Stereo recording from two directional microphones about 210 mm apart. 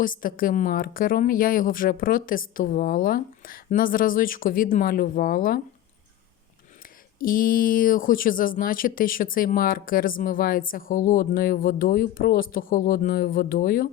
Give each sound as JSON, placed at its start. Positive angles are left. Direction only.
{"t": 0.0, "sound": "a woman's voice", "side_deg": 40}
{"t": 7.2, "sound": "a woman's voice", "side_deg": 40}